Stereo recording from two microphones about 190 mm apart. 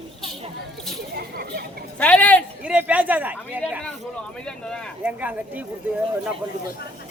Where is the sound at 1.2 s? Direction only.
55° right (ahead or behind).